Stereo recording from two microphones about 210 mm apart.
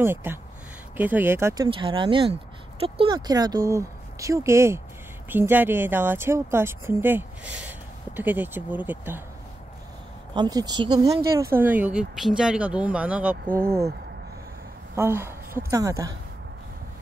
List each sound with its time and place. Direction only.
0.0 s speech: 10° right (ahead or behind)
10.3 s speech: 20° right (ahead or behind)
13.5 s speech: 45° right (ahead or behind)
15.0 s a woman's voice: 10° right (ahead or behind)